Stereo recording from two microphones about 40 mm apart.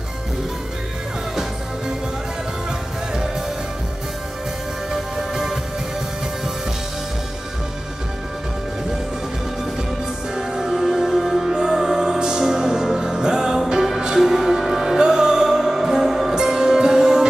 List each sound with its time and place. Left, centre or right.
4.9 s music: centre
10.3 s music: centre